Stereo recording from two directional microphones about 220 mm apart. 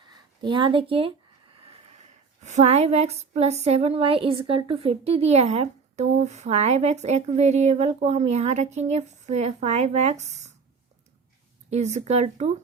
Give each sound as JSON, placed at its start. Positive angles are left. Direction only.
{"t": 0.1, "sound": "a woman's voice", "side_deg": -20}
{"t": 11.7, "sound": "a woman's voice", "side_deg": -30}